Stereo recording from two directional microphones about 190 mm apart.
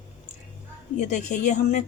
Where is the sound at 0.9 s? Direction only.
40° left (ahead or behind).